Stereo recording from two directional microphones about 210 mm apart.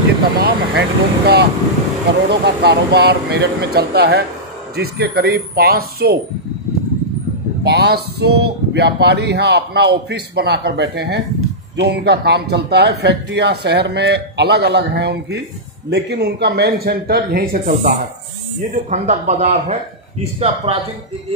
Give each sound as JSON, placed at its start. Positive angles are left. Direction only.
{"t": 0.4, "sound": "a man's voice", "side_deg": -50}
{"t": 7.6, "sound": "a man's voice", "side_deg": -50}